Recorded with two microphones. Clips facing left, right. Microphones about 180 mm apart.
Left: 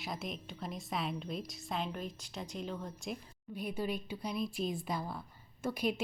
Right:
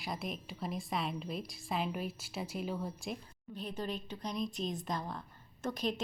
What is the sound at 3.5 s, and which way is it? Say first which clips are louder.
A woman's voice: left 2 dB; 10° left (ahead or behind).